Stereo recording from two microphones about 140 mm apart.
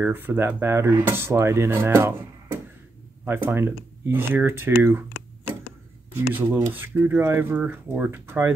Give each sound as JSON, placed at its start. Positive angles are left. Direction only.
{"t": 0.0, "sound": "speech", "side_deg": -15}
{"t": 6.1, "sound": "speech", "side_deg": -15}